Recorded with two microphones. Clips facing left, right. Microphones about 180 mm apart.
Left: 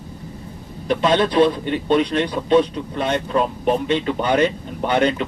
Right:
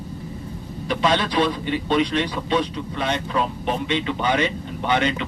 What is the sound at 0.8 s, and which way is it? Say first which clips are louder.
A man's voice: left 4 dB; 45° left (ahead or behind).